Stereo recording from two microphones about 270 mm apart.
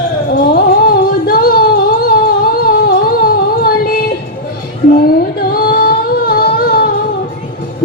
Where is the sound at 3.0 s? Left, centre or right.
Left.